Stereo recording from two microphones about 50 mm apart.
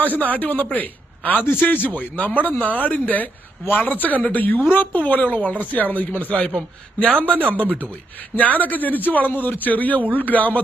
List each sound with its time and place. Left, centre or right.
0.0 s a man's voice: left
7.3 s speech: right
8.4 s a man's voice: left